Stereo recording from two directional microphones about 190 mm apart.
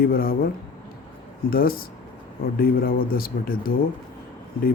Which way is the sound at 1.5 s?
50° left (ahead or behind).